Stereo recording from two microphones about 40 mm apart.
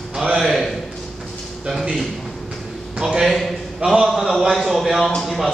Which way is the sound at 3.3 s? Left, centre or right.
Centre.